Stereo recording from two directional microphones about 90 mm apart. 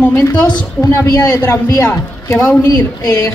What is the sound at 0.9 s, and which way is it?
Speech, 30° left (ahead or behind).